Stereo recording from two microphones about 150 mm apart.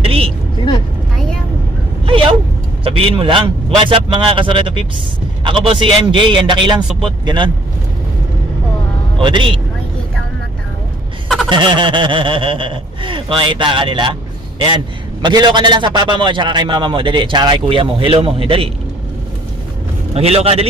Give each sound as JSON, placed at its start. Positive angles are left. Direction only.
{"t": 0.0, "sound": "a sound", "side_deg": -40}
{"t": 2.0, "sound": "a sound", "side_deg": -35}
{"t": 2.8, "sound": "a man's voice", "side_deg": -35}
{"t": 9.2, "sound": "a man's voice", "side_deg": -35}
{"t": 11.4, "sound": "a man's voice", "side_deg": -30}
{"t": 15.2, "sound": "a man's voice", "side_deg": -30}
{"t": 20.2, "sound": "a man's voice", "side_deg": -40}